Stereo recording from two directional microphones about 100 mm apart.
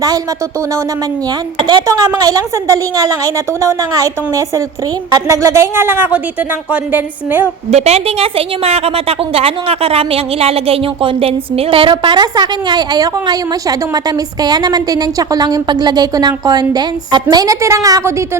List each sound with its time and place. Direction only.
1.9 s a woman's voice: 40° right (ahead or behind); by 7.4 s 15° right (ahead or behind)
7.7 s a woman's voice: 90° right; by 11.9 s 70° right (ahead or behind)
11.9 s a woman's voice: 45° right (ahead or behind)